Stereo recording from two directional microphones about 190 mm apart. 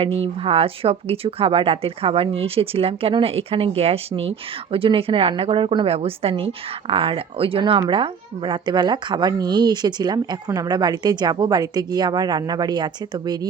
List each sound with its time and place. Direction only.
0.0 s speech: 30° right (ahead or behind)